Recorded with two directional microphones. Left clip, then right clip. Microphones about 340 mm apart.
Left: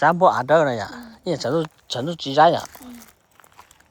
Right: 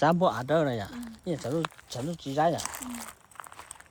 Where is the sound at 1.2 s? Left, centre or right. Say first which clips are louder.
Left 9 dB; left.